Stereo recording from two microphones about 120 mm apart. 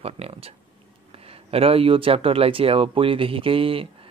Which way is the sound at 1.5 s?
50° right (ahead or behind).